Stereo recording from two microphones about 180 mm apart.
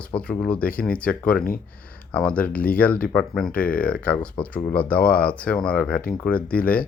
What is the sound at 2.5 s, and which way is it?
Speech, 55° left (ahead or behind).